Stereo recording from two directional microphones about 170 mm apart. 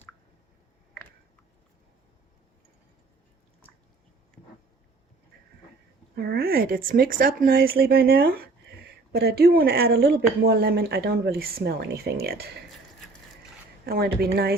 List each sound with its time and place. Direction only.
6.1 s speech: 65° right (ahead or behind)
13.8 s speech: 65° right (ahead or behind)